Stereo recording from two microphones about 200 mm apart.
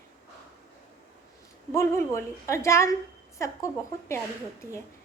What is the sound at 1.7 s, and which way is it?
A woman's voice, 15° left (ahead or behind).